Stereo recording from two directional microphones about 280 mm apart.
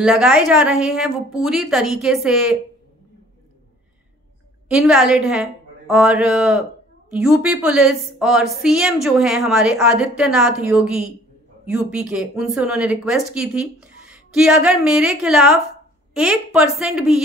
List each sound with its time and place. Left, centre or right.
0.0 s a woman's voice: centre
4.6 s a woman's voice: centre